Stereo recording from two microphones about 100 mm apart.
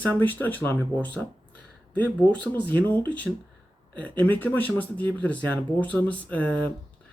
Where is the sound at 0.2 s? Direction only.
20° left (ahead or behind).